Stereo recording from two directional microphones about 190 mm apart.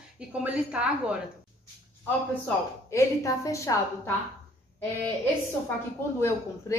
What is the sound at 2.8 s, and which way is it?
A woman's voice, 15° left (ahead or behind).